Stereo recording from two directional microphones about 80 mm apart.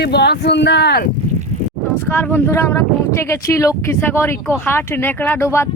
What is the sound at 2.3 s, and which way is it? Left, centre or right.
Speech, left.